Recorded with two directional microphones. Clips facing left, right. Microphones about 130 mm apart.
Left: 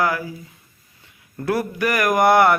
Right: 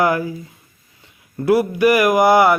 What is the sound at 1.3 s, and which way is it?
Mantra, 10° right (ahead or behind).